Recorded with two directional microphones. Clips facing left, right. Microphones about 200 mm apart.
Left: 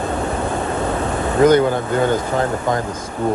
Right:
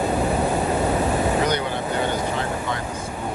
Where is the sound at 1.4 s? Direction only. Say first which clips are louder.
Left 10 dB; 50° left (ahead or behind).